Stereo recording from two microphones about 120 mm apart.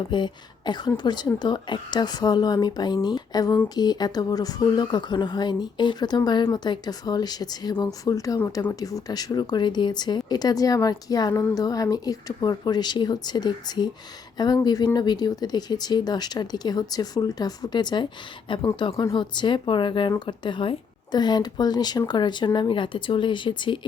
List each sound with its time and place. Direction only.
0.1 s speech: 40° left (ahead or behind)